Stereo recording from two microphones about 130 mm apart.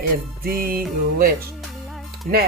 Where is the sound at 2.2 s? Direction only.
90° right.